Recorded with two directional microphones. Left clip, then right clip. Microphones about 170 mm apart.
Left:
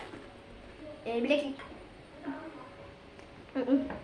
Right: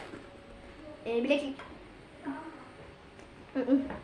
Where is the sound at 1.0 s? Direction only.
Centre (ahead or behind).